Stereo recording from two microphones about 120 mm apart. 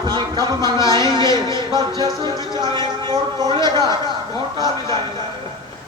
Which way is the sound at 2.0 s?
35° right (ahead or behind).